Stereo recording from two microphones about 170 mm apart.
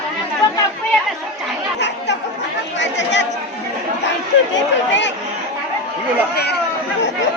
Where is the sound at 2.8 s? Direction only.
90° left.